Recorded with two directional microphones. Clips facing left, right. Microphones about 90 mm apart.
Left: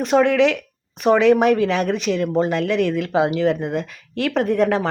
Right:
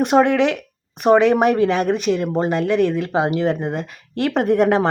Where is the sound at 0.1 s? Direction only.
15° right (ahead or behind).